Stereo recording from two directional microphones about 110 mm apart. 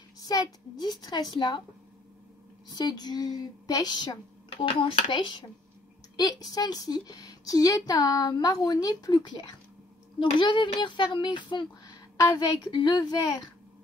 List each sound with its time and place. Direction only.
0.2 s a woman's voice: 35° left (ahead or behind)
2.7 s a woman's voice: 40° left (ahead or behind)
4.5 s a woman's voice: 55° left (ahead or behind)